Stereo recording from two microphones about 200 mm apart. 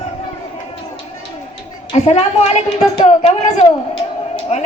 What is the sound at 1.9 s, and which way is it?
A woman's voice, 30° left (ahead or behind).